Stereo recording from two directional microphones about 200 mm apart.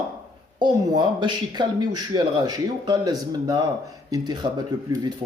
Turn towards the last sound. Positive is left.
turn(degrees=-20)  # may be behind; listen again after turning